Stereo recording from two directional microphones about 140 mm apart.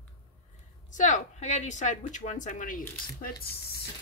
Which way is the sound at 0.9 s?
60° left (ahead or behind).